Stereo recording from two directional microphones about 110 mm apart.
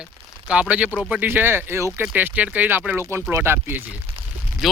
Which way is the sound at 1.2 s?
20° right (ahead or behind).